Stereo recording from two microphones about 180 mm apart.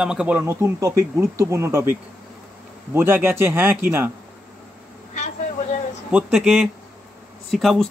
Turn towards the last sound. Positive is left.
turn(degrees=0)  # may be behind; listen again after turning